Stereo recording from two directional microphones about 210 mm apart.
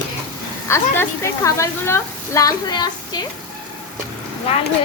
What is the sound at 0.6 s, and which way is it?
A woman's voice, 10° left (ahead or behind).